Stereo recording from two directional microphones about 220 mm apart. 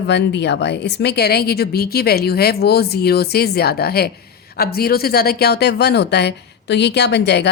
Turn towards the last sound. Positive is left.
turn(degrees=50)  # may be behind; listen again after turning